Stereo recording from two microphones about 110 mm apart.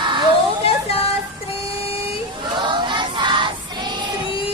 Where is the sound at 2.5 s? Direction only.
45° right (ahead or behind).